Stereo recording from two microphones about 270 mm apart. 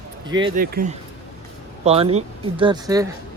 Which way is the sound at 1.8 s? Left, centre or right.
Right.